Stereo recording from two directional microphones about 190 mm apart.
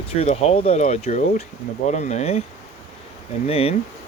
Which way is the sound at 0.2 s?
30° left (ahead or behind).